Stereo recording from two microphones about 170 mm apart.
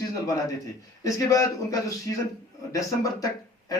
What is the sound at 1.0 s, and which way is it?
Speech, 20° left (ahead or behind).